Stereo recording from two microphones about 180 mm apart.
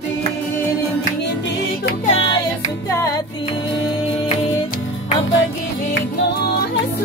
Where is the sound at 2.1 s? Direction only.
30° left (ahead or behind).